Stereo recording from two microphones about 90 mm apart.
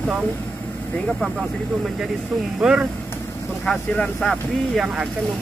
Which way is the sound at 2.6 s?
10° right (ahead or behind).